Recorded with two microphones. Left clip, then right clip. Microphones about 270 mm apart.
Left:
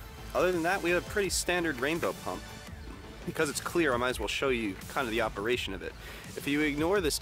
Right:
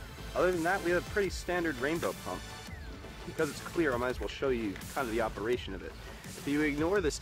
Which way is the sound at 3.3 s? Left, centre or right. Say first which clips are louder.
Left 3 dB; left.